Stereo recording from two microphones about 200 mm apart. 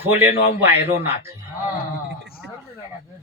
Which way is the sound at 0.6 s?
10° right (ahead or behind).